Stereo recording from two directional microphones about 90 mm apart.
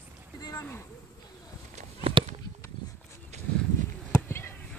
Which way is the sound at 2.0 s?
90° right.